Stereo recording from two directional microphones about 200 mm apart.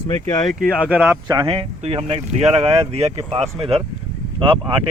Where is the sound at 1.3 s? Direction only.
20° right (ahead or behind).